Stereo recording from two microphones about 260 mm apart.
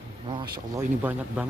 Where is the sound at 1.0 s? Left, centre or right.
Centre.